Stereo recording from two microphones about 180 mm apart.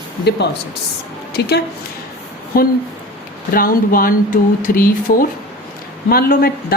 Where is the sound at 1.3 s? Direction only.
65° left (ahead or behind).